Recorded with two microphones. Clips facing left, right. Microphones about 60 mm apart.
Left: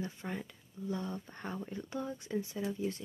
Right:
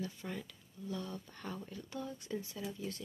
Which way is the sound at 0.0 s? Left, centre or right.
Left.